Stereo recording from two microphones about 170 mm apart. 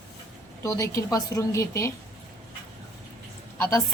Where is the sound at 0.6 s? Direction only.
20° left (ahead or behind).